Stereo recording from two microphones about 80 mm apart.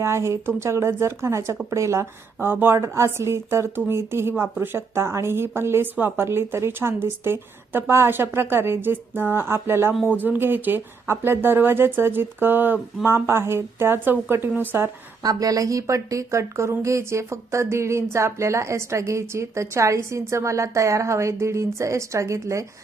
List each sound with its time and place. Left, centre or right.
0.0 s a woman's voice: right
15.2 s a woman's voice: right